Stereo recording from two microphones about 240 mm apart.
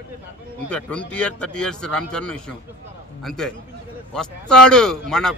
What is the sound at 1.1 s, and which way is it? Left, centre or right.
Speech, centre.